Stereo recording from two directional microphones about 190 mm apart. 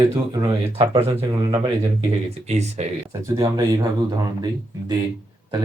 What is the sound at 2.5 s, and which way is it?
Speech, 35° right (ahead or behind).